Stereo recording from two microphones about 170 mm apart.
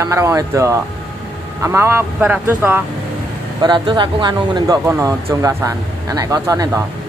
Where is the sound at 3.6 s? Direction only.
25° right (ahead or behind).